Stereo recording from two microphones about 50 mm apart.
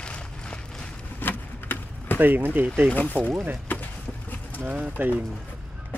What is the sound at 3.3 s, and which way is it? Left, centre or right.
Speech, right.